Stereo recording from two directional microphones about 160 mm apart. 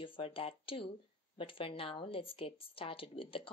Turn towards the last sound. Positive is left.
turn(degrees=35)  # may be behind; listen again after turning